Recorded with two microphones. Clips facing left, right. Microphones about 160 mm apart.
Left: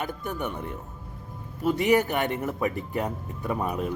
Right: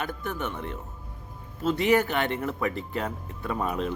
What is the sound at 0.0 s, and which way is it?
Speech, 15° left (ahead or behind).